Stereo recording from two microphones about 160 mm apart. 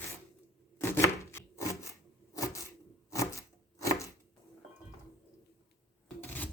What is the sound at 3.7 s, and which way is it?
Chopping, 20° left (ahead or behind).